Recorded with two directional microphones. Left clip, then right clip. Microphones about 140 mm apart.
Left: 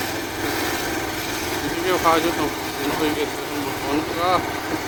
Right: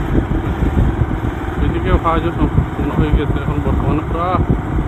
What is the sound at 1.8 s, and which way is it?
Vehicle, 35° left (ahead or behind).